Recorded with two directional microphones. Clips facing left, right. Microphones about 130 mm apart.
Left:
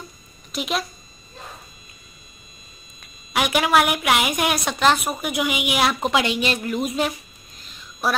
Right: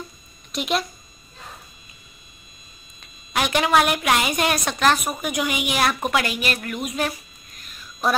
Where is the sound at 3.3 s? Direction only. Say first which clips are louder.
Even; 10° left (ahead or behind); by 7.0 s 30° left (ahead or behind).